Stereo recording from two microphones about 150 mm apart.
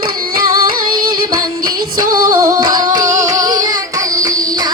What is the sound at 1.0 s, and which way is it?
Music, 75° right (ahead or behind).